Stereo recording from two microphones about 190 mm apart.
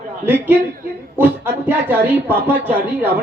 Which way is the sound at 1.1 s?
10° right (ahead or behind).